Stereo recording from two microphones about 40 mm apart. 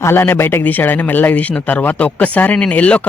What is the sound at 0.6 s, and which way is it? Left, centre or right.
Speech, left.